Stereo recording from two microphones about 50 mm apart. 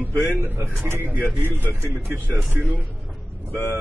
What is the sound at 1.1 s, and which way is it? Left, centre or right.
A man's voice, right.